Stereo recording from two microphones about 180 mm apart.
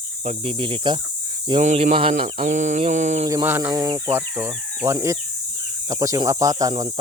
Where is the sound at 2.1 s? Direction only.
45° right (ahead or behind).